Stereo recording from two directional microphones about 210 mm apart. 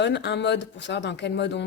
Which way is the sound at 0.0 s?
55° left (ahead or behind).